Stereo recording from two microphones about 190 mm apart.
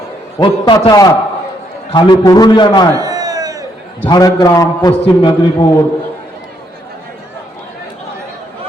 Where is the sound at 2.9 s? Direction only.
20° right (ahead or behind).